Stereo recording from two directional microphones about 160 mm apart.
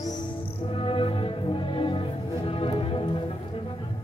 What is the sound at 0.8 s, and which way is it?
Music, 35° left (ahead or behind).